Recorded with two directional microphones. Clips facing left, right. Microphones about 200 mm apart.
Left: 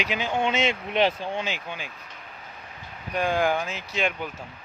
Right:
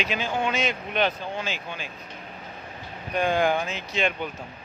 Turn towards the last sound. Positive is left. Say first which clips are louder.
# right 1 dB
turn(degrees=5)  # may be behind; listen again after turning